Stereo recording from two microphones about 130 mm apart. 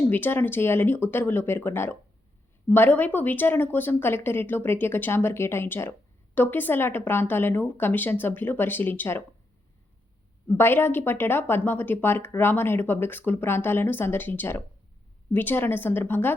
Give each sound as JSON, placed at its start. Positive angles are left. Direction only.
{"t": 0.1, "sound": "speech", "side_deg": 15}
{"t": 10.6, "sound": "speech", "side_deg": 15}